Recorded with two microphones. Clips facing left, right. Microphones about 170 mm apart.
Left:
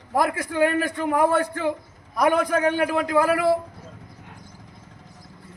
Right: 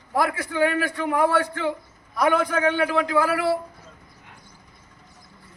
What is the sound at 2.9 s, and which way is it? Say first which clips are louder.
Speech: left 1 dB; 50° left (ahead or behind).